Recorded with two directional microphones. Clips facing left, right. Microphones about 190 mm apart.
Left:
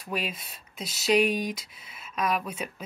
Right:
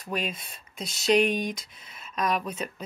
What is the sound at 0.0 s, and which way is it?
Speech, 5° left (ahead or behind).